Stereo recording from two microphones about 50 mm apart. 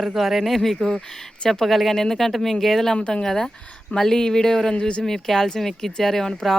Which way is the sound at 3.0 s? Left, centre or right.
Left.